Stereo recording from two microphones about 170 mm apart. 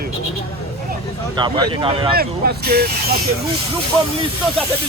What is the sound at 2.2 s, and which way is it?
Speech, 65° right (ahead or behind).